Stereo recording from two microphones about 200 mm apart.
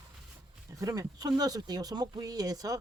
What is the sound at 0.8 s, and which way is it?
Speech, 15° right (ahead or behind).